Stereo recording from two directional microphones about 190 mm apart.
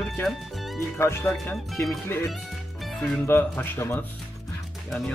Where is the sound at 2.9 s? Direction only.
5° left (ahead or behind).